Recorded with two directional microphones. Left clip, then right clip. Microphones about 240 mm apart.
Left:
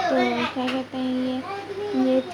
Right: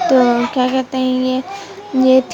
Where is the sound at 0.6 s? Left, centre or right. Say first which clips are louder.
Right 11 dB; right.